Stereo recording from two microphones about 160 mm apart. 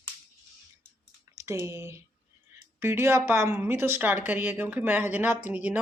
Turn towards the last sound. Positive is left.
turn(degrees=-10)  # may be behind; listen again after turning